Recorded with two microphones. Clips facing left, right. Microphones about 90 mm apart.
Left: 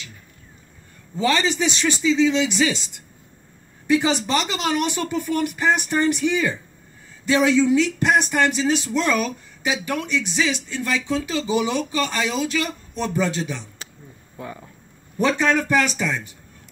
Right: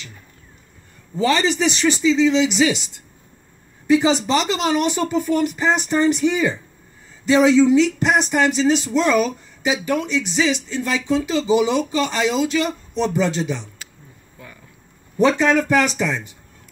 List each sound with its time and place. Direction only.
1.2 s speech: 5° right (ahead or behind)
3.9 s speech: 15° right (ahead or behind)
15.1 s speech: 15° right (ahead or behind)